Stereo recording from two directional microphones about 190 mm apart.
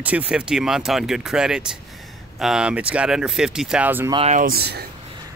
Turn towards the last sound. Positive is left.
turn(degrees=-55)  # may be behind; listen again after turning